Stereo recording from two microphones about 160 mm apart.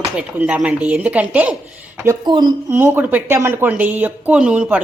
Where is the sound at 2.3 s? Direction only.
25° right (ahead or behind).